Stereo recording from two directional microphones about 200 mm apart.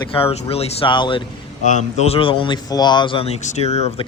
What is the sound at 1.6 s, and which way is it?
Speech, 35° left (ahead or behind).